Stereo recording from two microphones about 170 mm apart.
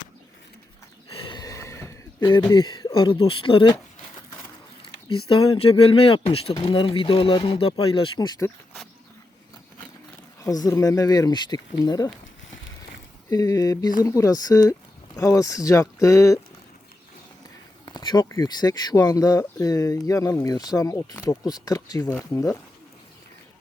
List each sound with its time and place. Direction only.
1.1 s a sound: 25° left (ahead or behind)
2.5 s speech: 25° left (ahead or behind)
4.8 s speech: 30° left (ahead or behind)
10.4 s speech: 20° left (ahead or behind)
13.3 s speech: 20° left (ahead or behind)
17.8 s speech: 25° left (ahead or behind)